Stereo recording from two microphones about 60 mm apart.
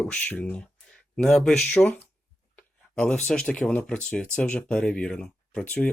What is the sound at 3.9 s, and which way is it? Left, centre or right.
Speech, centre.